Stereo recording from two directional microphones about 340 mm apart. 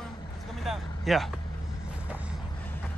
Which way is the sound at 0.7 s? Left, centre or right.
Centre.